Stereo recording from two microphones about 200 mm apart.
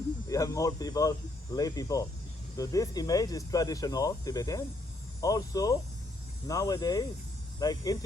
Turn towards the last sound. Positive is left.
turn(degrees=20)  # may be behind; listen again after turning